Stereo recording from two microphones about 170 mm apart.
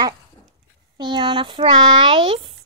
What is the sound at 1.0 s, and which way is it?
Speech, 25° right (ahead or behind).